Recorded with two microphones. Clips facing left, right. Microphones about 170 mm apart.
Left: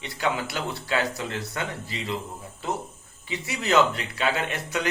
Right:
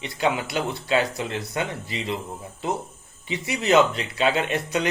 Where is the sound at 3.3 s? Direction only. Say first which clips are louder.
Right 4 dB; 20° right (ahead or behind).